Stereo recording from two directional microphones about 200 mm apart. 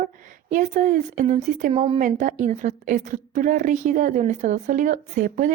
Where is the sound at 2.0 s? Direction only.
40° right (ahead or behind).